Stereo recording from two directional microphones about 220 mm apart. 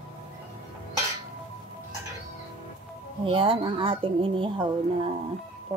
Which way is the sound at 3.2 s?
25° right (ahead or behind).